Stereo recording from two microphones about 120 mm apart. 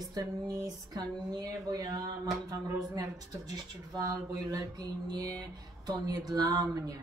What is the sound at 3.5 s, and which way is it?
Speech, 30° right (ahead or behind).